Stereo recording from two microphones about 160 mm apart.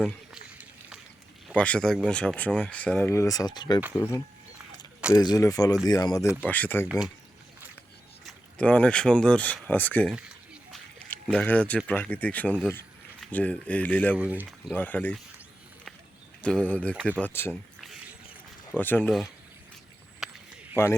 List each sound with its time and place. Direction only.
0.3 s a sound: 5° right (ahead or behind)
1.5 s speech: 10° left (ahead or behind)
6.4 s speech: 10° left (ahead or behind)
8.3 s speech: 5° left (ahead or behind)
10.2 s a sound: 5° right (ahead or behind)
11.1 s speech: 10° left (ahead or behind)
14.2 s speech: 10° right (ahead or behind)
14.7 s speech: 10° left (ahead or behind)
16.4 s speech: 5° left (ahead or behind)
18.8 s speech: 10° left (ahead or behind)
20.2 s a sound: 5° right (ahead or behind)